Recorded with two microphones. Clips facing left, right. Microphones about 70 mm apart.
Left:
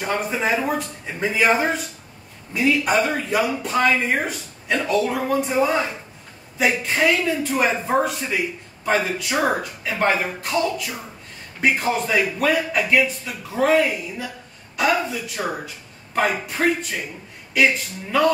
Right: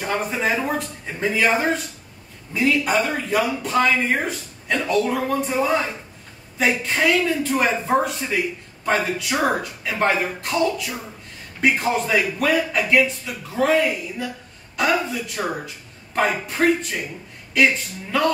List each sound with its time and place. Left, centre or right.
0.0 s a man's voice: centre